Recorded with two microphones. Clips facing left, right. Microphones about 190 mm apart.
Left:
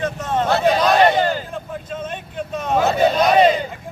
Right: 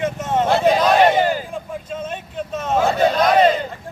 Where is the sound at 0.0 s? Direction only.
20° right (ahead or behind).